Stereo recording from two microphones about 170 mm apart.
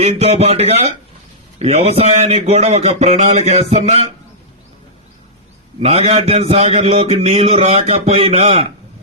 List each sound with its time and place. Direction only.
0.0 s a man's voice: 35° right (ahead or behind)
5.8 s a man's voice: 35° right (ahead or behind)